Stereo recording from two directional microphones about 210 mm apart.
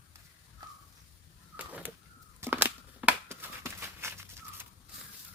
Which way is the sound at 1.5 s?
5° right (ahead or behind).